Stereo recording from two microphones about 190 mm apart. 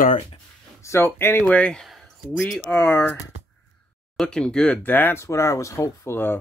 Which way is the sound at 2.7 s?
10° left (ahead or behind).